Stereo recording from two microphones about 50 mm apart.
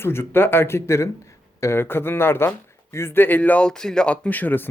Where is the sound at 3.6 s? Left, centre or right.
Centre.